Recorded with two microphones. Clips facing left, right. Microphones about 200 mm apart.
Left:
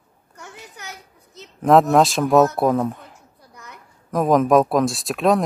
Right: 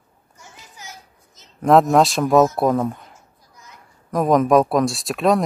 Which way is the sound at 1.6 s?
Centre (ahead or behind).